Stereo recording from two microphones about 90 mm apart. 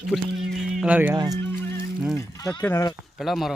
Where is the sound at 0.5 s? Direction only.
5° right (ahead or behind).